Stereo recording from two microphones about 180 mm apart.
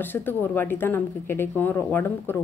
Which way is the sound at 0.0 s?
10° left (ahead or behind).